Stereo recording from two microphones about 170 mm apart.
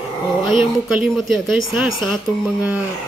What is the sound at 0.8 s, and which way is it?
Speech, centre (ahead or behind).